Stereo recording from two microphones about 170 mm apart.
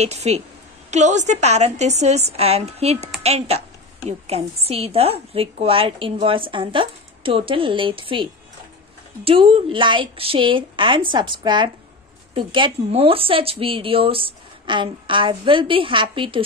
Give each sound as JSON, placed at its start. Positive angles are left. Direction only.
{"t": 0.0, "sound": "a woman's voice", "side_deg": -40}